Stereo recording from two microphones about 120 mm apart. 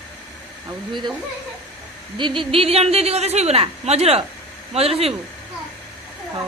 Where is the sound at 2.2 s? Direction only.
45° right (ahead or behind).